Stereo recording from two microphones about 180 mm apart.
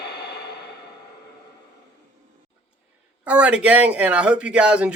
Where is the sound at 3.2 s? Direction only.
5° right (ahead or behind).